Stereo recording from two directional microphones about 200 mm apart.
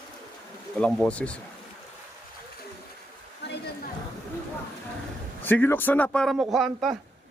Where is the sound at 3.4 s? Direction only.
55° left (ahead or behind).